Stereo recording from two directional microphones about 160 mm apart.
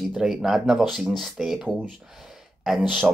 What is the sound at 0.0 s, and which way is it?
Speech, centre (ahead or behind).